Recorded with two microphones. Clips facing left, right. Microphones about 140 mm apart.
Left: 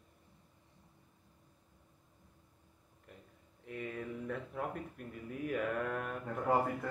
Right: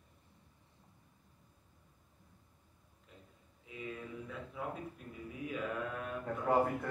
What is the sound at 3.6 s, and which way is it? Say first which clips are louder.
A man's voice: left 3 dB; 60° left (ahead or behind).